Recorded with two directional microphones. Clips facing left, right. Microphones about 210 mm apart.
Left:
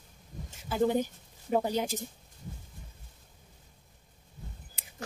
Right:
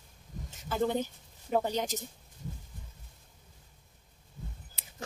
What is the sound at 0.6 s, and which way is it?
Speech, 10° left (ahead or behind).